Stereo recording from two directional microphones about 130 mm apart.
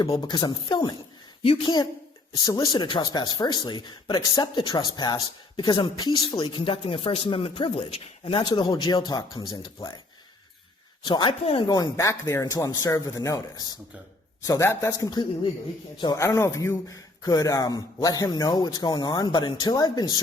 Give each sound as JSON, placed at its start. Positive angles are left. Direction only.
{"t": 0.2, "sound": "speech", "side_deg": 35}
{"t": 1.4, "sound": "a woman's voice", "side_deg": 45}
{"t": 2.3, "sound": "speech", "side_deg": 30}
{"t": 11.0, "sound": "speech", "side_deg": 40}
{"t": 11.7, "sound": "a man's voice", "side_deg": 25}